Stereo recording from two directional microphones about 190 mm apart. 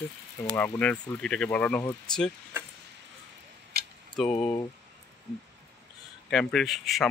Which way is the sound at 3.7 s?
55° right (ahead or behind).